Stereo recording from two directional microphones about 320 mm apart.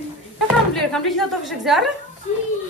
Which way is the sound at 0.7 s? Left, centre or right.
Centre.